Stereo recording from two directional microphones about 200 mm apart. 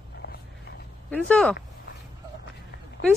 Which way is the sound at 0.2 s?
55° left (ahead or behind).